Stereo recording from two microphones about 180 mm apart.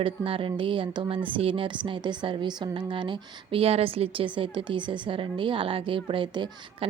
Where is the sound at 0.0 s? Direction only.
30° right (ahead or behind).